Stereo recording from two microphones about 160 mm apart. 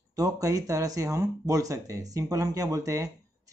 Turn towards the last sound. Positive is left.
turn(degrees=-20)  # may be behind; listen again after turning